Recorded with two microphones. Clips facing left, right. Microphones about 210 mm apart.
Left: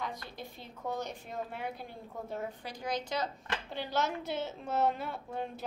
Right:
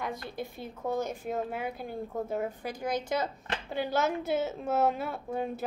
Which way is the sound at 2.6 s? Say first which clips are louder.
Right 4 dB; 50° right (ahead or behind).